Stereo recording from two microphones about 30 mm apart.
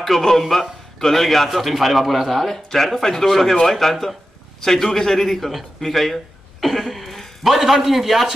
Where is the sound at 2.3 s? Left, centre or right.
Centre.